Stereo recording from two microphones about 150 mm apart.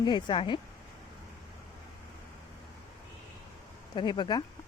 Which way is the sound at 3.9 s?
30° left (ahead or behind).